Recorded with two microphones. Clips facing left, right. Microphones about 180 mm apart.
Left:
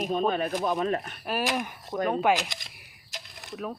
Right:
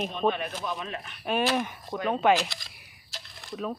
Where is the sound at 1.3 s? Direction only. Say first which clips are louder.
Right 3 dB; 5° left (ahead or behind).